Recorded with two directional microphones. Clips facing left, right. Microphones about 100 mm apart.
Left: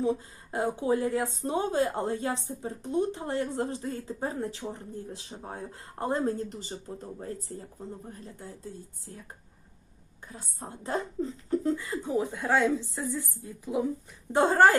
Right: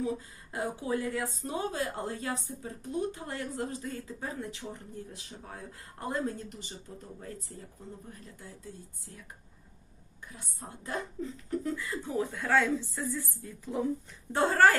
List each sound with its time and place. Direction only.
0.0 s speech: 30° left (ahead or behind)
10.3 s speech: 30° left (ahead or behind)